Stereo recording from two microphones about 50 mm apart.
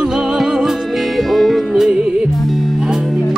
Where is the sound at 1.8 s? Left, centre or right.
Centre.